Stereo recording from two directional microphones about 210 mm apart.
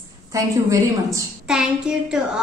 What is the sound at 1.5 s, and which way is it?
Child singing, 5° right (ahead or behind).